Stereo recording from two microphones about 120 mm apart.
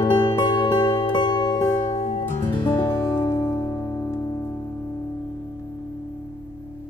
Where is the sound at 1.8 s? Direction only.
80° left.